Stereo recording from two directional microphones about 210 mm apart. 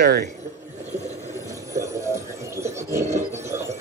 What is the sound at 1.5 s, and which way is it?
Music, 15° right (ahead or behind).